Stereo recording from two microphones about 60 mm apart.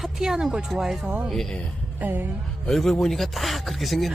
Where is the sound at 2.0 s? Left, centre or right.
Right.